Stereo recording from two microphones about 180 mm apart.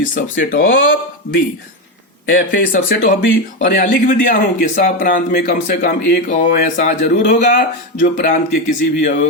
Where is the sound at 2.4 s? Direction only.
50° left (ahead or behind).